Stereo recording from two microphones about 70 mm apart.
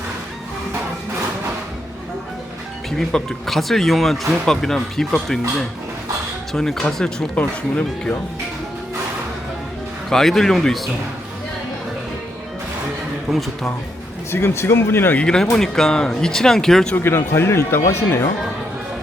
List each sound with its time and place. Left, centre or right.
3.0 s speech: centre
10.1 s speech: centre
13.3 s speech: centre
14.3 s speech: left
15.1 s speech: centre
16.9 s speech: left